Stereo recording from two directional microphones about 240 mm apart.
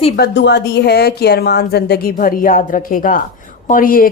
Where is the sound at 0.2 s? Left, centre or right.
Left.